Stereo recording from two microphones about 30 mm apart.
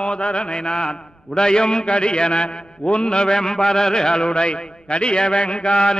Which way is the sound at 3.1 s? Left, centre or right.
Left.